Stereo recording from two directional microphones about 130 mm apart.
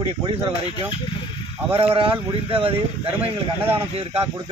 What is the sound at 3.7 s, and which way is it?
Speech, 45° right (ahead or behind).